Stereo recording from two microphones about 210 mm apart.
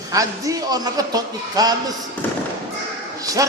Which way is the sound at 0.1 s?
15° right (ahead or behind).